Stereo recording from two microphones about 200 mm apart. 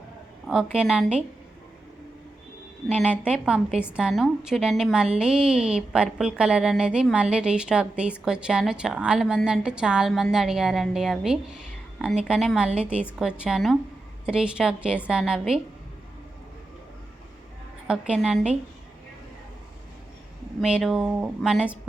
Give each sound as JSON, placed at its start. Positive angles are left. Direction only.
{"t": 0.4, "sound": "a woman's voice", "side_deg": -5}
{"t": 3.0, "sound": "a woman's voice", "side_deg": -5}
{"t": 18.1, "sound": "a woman's voice", "side_deg": -5}
{"t": 20.6, "sound": "a woman's voice", "side_deg": 0}